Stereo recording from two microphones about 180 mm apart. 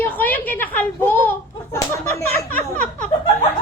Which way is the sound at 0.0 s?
10° left (ahead or behind).